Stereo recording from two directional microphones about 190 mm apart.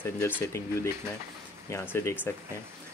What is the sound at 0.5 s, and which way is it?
Speech, 15° left (ahead or behind).